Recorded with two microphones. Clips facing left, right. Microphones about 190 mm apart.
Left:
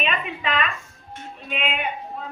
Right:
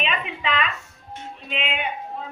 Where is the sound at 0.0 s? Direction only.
45° left (ahead or behind).